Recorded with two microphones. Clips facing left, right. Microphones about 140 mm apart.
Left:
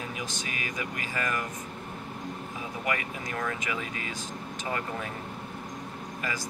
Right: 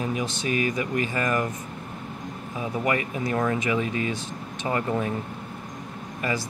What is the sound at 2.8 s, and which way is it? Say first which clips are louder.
Speech: right 6 dB; 35° right (ahead or behind).